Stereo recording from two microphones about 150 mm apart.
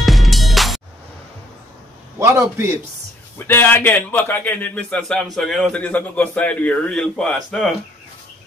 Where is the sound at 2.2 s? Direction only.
20° right (ahead or behind).